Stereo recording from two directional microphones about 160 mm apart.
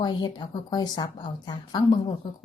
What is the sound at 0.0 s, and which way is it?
Speech, 25° left (ahead or behind).